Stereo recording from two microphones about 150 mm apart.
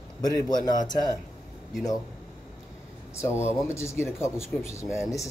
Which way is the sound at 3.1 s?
20° left (ahead or behind).